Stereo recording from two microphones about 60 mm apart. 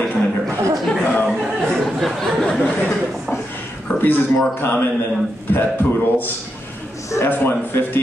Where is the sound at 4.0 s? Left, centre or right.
Left.